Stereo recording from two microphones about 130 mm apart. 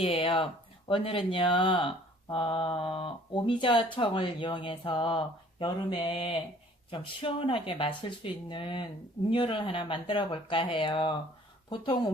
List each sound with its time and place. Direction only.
0.0 s speech: 45° left (ahead or behind)